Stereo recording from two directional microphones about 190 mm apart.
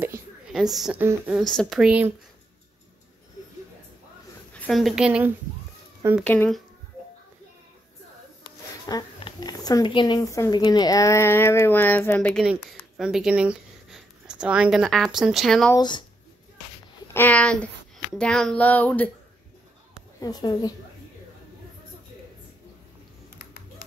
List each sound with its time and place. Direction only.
0.0 s a sound: 5° right (ahead or behind)
1.0 s speech: 10° right (ahead or behind)
1.4 s speech: 5° left (ahead or behind)
4.6 s speech: centre (ahead or behind)
6.2 s speech: 10° left (ahead or behind)
8.5 s speech: 20° left (ahead or behind); by 15.7 s centre (ahead or behind)
15.7 s a woman's voice: 20° left (ahead or behind)
17.1 s speech: 10° left (ahead or behind)
20.2 s a woman's voice: 20° left (ahead or behind)
23.3 s typing: 50° left (ahead or behind)